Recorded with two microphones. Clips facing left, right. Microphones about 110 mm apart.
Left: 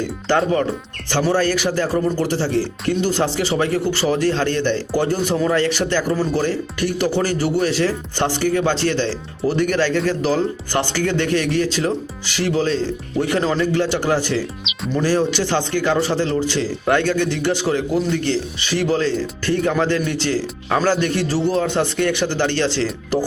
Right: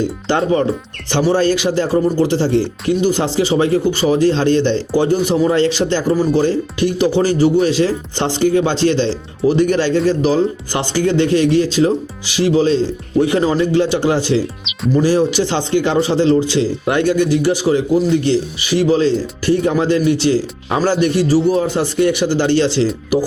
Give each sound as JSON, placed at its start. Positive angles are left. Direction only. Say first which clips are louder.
{"t": 0.0, "sound": "a man's voice", "louder": "right 2 dB", "side_deg": -20}